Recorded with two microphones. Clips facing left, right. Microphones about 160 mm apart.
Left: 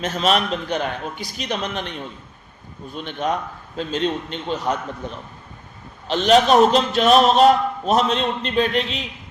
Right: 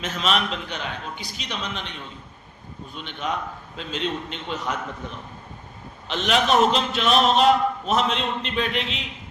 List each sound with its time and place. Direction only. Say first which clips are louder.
0.0 s a man's voice: left 5 dB; 40° left (ahead or behind)